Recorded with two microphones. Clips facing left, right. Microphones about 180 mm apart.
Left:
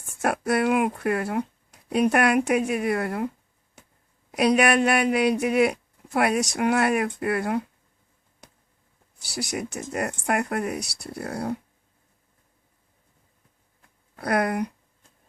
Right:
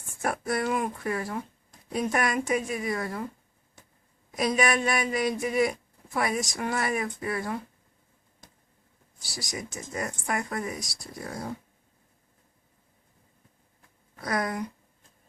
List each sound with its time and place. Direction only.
0.2 s speech: 70° left (ahead or behind)
4.3 s speech: 65° left (ahead or behind)
9.3 s speech: 65° left (ahead or behind)
14.2 s speech: 60° left (ahead or behind)